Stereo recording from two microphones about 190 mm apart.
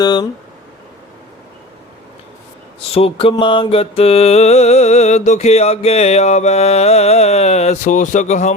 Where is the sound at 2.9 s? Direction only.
30° left (ahead or behind).